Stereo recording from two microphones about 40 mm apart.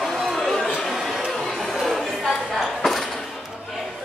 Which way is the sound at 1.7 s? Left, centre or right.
Centre.